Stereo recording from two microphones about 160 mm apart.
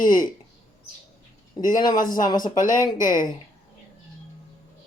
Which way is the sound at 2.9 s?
55° left (ahead or behind).